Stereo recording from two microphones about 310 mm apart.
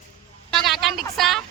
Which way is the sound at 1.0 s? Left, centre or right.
Centre.